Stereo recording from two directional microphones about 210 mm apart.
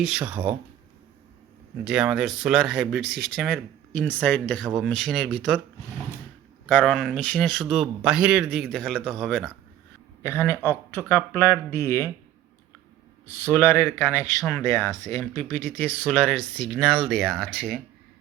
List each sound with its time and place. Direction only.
0.0 s speech: 5° right (ahead or behind)
1.8 s speech: 5° right (ahead or behind)
3.0 s speech: 50° right (ahead or behind)
3.3 s speech: centre (ahead or behind)
6.7 s speech: 5° left (ahead or behind)
10.2 s speech: 10° left (ahead or behind)
13.2 s speech: 10° left (ahead or behind)